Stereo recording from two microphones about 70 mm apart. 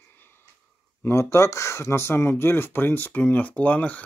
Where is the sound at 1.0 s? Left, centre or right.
Left.